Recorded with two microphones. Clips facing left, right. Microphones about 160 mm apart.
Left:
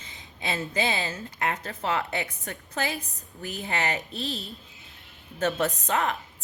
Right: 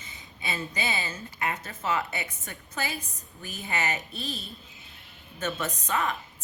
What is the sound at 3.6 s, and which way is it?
Speech, 65° left (ahead or behind).